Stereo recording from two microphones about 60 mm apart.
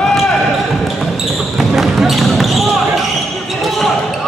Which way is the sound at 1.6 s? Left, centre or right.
Centre.